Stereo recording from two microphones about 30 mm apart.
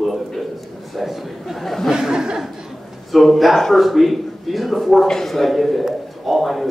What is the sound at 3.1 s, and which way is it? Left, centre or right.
A man's voice, centre.